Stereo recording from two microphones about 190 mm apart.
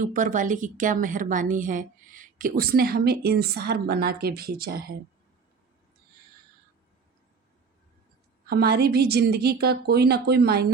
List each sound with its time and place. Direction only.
0.0 s a woman's voice: 45° right (ahead or behind)
8.4 s a woman's voice: 55° right (ahead or behind)